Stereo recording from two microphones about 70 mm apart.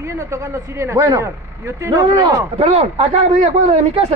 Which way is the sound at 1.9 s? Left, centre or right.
Right.